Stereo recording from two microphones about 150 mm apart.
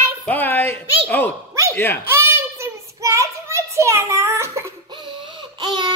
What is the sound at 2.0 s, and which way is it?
Child singing, 15° right (ahead or behind).